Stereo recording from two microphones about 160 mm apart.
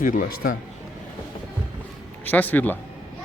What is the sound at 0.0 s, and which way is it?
Speech, 60° left (ahead or behind).